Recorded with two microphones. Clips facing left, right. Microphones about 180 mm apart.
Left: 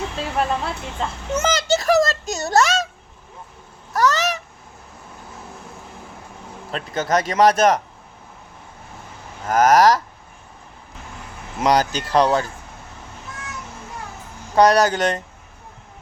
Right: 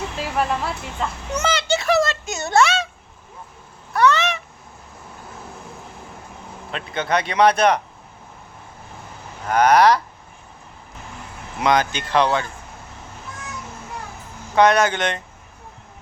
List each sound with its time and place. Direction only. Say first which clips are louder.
0.3 s speech: even; 25° left (ahead or behind)
1.5 s a sound: left 1 dB; 40° left (ahead or behind)
3.9 s honk: right 1 dB; 40° left (ahead or behind)
6.7 s speech: left 1 dB; 40° left (ahead or behind)
9.5 s speech: even; 40° left (ahead or behind)
11.6 s speech: left 1 dB; 40° left (ahead or behind)
14.5 s speech: left 1 dB; 40° left (ahead or behind)